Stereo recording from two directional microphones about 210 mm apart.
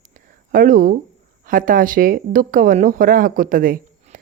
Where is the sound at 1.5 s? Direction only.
40° right (ahead or behind).